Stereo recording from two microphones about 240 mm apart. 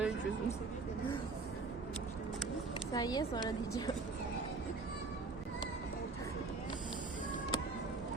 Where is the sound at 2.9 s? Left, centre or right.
Centre.